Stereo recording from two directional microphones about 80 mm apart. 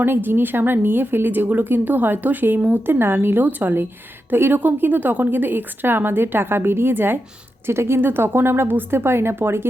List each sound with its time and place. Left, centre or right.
0.0 s a woman's voice: right